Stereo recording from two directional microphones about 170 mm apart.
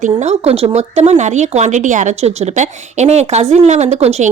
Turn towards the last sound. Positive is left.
turn(degrees=-40)  # may be behind; listen again after turning